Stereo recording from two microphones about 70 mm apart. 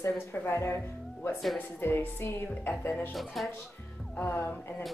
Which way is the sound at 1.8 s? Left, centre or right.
Left.